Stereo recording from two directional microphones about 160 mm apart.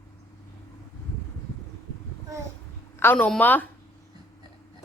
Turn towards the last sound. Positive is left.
turn(degrees=10)  # may be behind; listen again after turning